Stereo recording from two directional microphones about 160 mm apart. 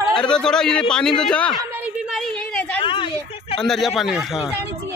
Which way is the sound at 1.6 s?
10° right (ahead or behind).